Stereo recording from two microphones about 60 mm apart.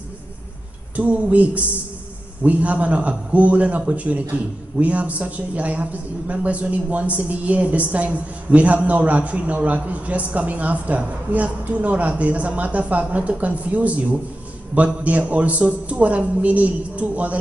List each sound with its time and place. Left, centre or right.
0.9 s a woman's voice: right